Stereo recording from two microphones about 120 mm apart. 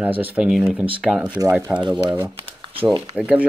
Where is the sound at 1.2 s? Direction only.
30° right (ahead or behind).